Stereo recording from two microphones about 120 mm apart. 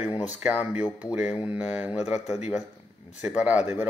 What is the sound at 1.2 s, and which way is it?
Speech, 55° left (ahead or behind).